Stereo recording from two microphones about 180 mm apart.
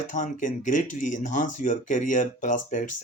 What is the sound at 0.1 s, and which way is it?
Speech, 45° left (ahead or behind).